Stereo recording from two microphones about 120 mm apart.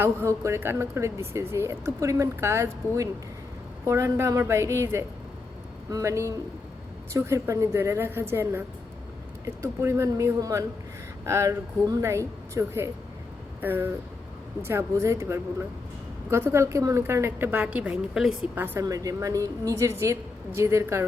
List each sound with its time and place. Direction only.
0.0 s speech: 20° right (ahead or behind); by 18.3 s 5° right (ahead or behind)
18.5 s speech: 20° right (ahead or behind)